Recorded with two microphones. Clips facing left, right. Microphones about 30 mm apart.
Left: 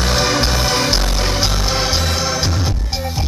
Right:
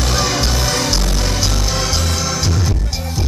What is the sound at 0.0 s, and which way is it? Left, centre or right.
Music, centre.